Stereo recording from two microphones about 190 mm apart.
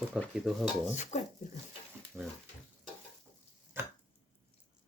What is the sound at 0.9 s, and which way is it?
Speech, 35° left (ahead or behind).